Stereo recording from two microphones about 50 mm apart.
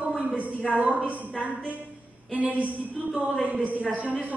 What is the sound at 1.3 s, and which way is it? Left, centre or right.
A woman's voice, right.